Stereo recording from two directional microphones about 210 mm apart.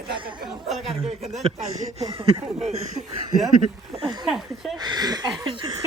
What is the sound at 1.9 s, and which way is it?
Speech, 25° right (ahead or behind).